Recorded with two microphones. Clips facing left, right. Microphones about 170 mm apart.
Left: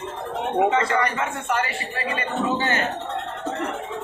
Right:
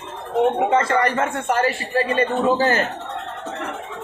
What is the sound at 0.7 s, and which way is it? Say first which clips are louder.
A man's voice: right 3 dB; 45° right (ahead or behind).